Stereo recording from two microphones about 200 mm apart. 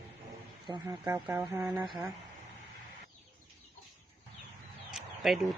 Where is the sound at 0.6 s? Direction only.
20° right (ahead or behind).